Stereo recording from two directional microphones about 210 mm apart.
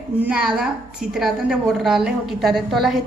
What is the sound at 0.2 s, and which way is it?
A woman's voice, 5° right (ahead or behind).